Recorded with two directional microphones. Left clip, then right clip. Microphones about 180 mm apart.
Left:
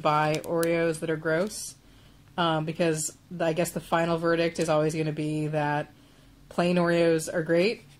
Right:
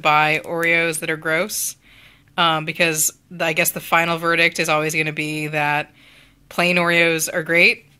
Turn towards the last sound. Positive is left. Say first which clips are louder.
# right 6 dB
turn(degrees=-15)  # may be behind; listen again after turning